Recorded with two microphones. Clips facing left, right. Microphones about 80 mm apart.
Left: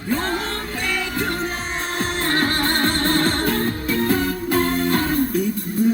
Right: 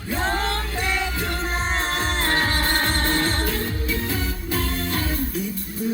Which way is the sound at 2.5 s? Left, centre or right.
Left.